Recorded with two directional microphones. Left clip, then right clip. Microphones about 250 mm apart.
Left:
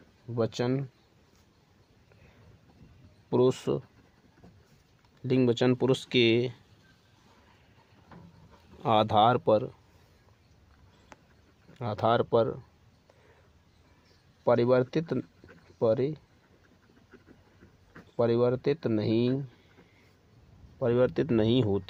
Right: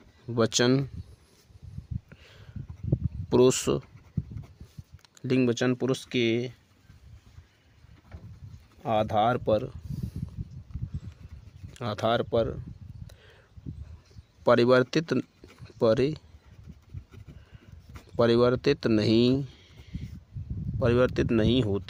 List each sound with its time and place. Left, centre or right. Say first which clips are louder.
0.3 s speech: right 6 dB; right
3.2 s speech: right 4 dB; right
5.1 s speech: even; right
8.8 s speech: left 2 dB; centre
11.7 s speech: even; right
14.4 s speech: right 3 dB; right
18.2 s speech: right 3 dB; right
20.7 s speech: right 1 dB; right